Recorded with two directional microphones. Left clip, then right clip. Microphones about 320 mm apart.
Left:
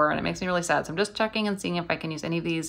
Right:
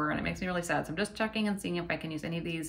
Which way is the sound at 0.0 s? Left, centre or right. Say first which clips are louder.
Left 8 dB; centre.